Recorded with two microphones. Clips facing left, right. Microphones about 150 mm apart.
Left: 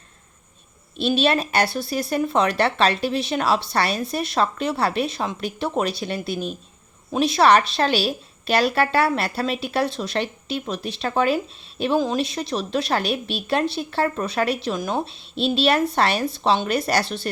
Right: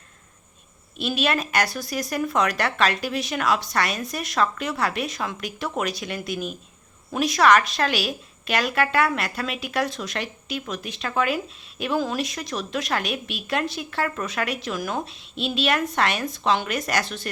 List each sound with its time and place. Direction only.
0.9 s a woman's voice: 30° left (ahead or behind)